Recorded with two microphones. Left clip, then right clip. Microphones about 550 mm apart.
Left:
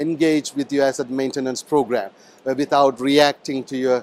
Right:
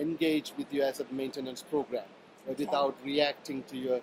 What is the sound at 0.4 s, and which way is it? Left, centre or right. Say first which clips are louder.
Speech: left 12 dB; left.